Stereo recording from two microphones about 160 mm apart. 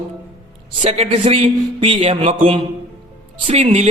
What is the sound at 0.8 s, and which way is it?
A man's voice, 40° right (ahead or behind).